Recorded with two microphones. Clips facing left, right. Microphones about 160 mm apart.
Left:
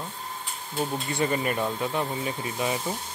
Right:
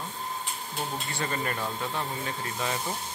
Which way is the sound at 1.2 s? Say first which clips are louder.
Left 6 dB; 15° left (ahead or behind).